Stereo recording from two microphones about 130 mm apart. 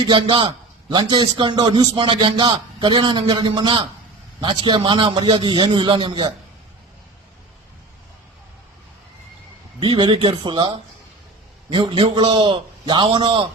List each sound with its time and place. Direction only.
0.1 s a man's voice: 40° right (ahead or behind)
9.8 s a man's voice: 35° right (ahead or behind)